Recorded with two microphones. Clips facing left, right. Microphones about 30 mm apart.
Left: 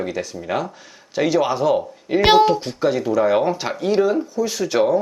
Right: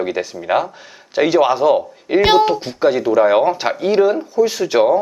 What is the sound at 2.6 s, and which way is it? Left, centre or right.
Speech, centre.